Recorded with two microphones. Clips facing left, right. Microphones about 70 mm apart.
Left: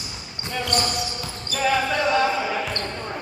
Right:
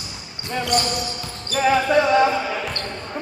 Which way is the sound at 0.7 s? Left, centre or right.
Centre.